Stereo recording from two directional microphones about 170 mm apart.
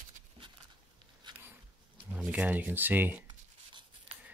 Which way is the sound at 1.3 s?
25° right (ahead or behind).